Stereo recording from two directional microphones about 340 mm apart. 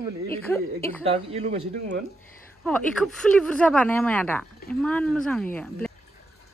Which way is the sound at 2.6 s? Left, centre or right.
Centre.